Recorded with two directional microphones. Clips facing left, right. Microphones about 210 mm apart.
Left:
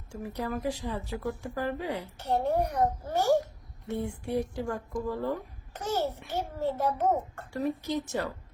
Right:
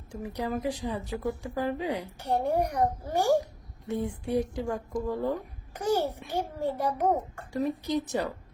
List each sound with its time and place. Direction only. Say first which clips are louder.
0.1 s speech: right 2 dB; 15° right (ahead or behind)